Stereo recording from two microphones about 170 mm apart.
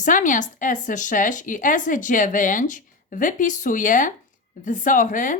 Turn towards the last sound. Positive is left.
turn(degrees=50)  # may be behind; listen again after turning